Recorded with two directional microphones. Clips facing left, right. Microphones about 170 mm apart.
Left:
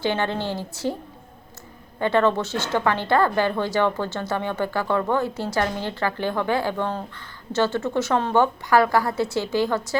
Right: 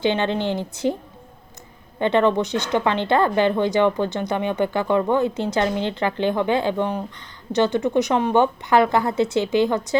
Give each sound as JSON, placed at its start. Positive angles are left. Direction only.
{"t": 0.0, "sound": "speech", "side_deg": -20}
{"t": 2.0, "sound": "speech", "side_deg": -20}